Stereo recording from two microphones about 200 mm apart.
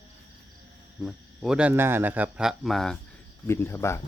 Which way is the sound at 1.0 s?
Centre (ahead or behind).